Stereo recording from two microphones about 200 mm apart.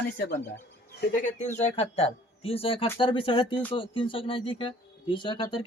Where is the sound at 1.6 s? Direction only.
35° left (ahead or behind).